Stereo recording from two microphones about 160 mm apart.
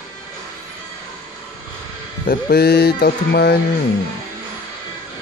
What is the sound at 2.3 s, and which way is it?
Speech, 80° left.